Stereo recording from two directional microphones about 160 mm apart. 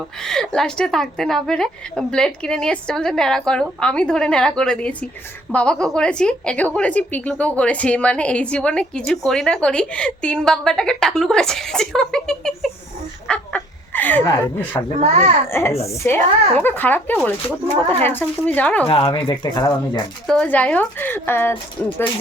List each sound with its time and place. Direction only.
0.3 s a woman's voice: 5° left (ahead or behind)
13.2 s a sound: 10° left (ahead or behind)
15.5 s speech: 15° left (ahead or behind)
18.9 s speech: 35° left (ahead or behind)
20.2 s speech: 5° left (ahead or behind)